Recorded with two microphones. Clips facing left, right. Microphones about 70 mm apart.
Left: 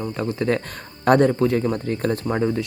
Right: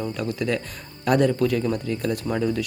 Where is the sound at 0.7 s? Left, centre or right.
Left.